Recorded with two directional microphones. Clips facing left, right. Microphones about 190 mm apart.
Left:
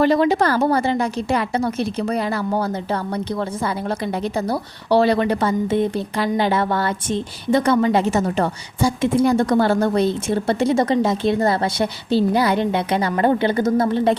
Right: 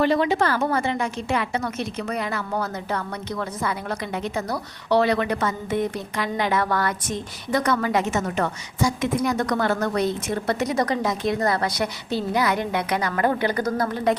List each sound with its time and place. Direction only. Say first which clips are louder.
0.0 s a woman's voice: left 4 dB; 40° left (ahead or behind)